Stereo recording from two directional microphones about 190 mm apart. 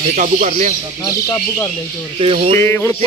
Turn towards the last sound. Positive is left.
turn(degrees=15)  # may be behind; listen again after turning